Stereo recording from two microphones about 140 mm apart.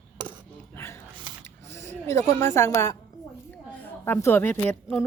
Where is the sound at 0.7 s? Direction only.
20° left (ahead or behind).